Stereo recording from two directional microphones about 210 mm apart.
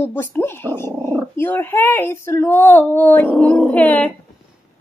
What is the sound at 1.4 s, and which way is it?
Speech, 10° left (ahead or behind).